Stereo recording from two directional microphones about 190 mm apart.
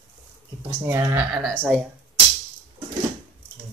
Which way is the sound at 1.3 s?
Centre (ahead or behind).